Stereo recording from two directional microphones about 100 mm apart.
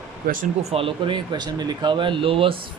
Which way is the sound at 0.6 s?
75° right (ahead or behind).